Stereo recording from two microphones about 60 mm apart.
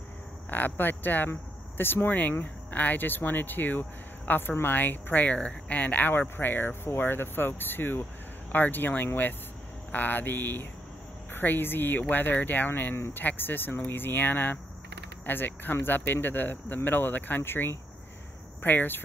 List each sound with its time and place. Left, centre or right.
0.5 s speech: left